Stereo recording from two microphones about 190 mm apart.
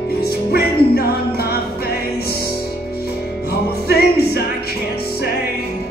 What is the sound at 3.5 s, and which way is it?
Music, 55° left (ahead or behind).